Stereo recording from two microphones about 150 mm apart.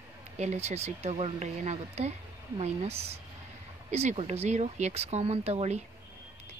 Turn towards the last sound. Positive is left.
turn(degrees=-45)  # may be behind; listen again after turning